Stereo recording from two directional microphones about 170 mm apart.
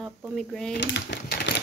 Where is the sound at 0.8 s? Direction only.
90° left.